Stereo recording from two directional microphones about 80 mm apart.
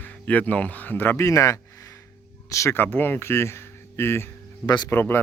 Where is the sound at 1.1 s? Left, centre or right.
Left.